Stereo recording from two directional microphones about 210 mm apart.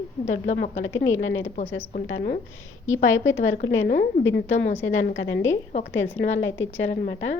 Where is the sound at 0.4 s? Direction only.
45° left (ahead or behind).